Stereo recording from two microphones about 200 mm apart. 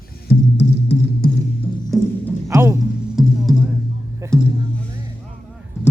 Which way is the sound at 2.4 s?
15° right (ahead or behind).